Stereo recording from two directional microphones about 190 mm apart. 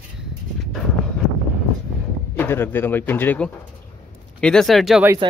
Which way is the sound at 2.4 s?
10° left (ahead or behind).